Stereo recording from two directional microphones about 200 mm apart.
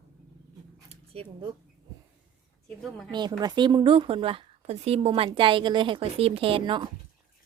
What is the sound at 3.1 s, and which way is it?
Speech, 20° right (ahead or behind).